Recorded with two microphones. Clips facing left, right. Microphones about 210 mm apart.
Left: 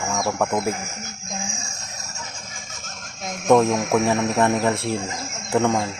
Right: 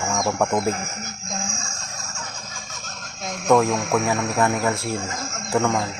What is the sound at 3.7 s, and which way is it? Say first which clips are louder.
Speech: left 2 dB; 20° left (ahead or behind).